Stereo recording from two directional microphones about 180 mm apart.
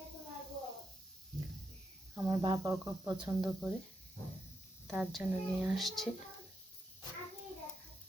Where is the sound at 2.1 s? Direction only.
20° right (ahead or behind).